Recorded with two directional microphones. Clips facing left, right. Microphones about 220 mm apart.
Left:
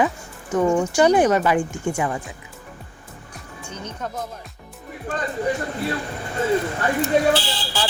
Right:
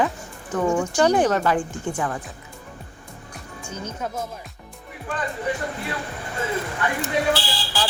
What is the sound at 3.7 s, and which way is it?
Speech, 5° right (ahead or behind).